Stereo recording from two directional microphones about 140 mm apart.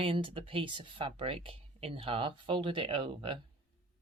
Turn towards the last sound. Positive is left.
turn(degrees=-40)  # may be behind; listen again after turning